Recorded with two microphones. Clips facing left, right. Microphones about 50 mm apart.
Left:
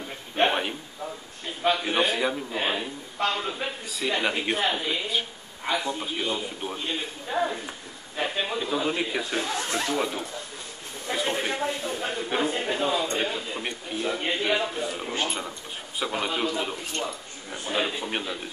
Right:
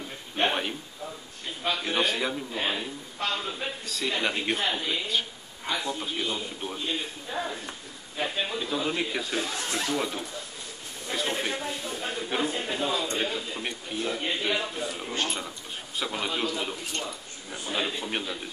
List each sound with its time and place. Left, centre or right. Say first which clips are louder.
0.4 s a sound: left 3 dB; centre
1.6 s a man's voice: left 6 dB; left
1.9 s a man's voice: left 3 dB; centre
8.5 s a man's voice: left 3 dB; centre
11.1 s a sound: left 2 dB; centre
11.6 s a man's voice: left 4 dB; centre